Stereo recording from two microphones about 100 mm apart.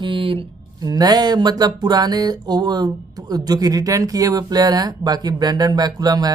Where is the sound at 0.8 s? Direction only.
40° right (ahead or behind).